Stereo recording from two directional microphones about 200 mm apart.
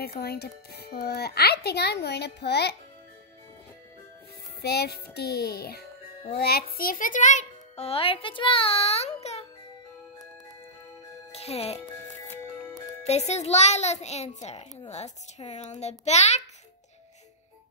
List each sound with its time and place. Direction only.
0.0 s a child's voice: 50° left (ahead or behind)
4.6 s a child's voice: 50° left (ahead or behind); by 9.5 s 30° left (ahead or behind)
11.3 s a child's voice: 30° left (ahead or behind)
11.8 s music: 15° left (ahead or behind)
13.0 s a child's voice: 35° left (ahead or behind)